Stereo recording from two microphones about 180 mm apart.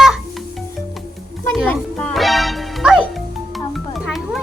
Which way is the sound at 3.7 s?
Centre (ahead or behind).